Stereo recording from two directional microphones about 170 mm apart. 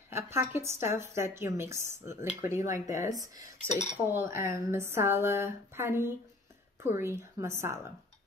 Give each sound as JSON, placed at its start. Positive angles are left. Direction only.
{"t": 0.1, "sound": "a woman's voice", "side_deg": -15}
{"t": 2.2, "sound": "speech", "side_deg": 45}
{"t": 2.9, "sound": "a woman's voice", "side_deg": -20}
{"t": 3.6, "sound": "speech", "side_deg": 40}
{"t": 4.1, "sound": "a woman's voice", "side_deg": -15}